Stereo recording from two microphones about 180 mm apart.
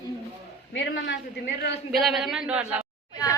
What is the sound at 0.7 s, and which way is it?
Speech, 85° left.